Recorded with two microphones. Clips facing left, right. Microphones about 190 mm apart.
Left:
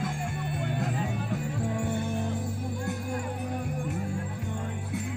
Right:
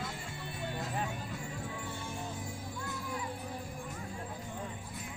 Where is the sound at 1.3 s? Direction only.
70° left (ahead or behind).